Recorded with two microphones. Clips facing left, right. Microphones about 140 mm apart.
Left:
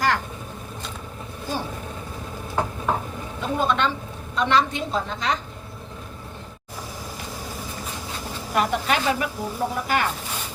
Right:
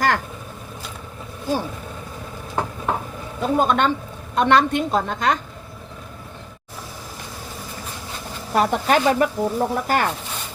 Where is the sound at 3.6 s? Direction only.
45° right (ahead or behind).